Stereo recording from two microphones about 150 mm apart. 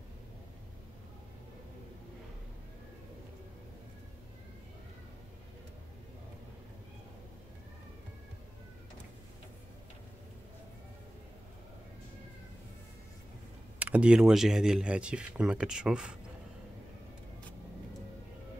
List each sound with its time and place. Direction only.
13.7 s speech: 10° right (ahead or behind)